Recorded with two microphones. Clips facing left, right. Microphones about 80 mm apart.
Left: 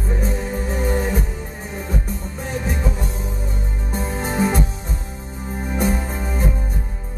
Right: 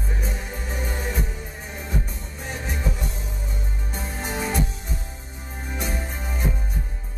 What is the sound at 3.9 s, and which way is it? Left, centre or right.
Music, left.